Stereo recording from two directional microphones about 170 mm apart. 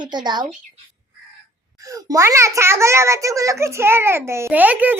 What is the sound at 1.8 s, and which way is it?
A child's voice, 20° right (ahead or behind).